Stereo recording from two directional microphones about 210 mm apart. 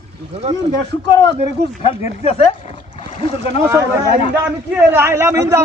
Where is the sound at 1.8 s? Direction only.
25° left (ahead or behind).